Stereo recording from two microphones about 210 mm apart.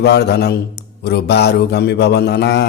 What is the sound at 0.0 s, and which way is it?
Speech, 50° left (ahead or behind).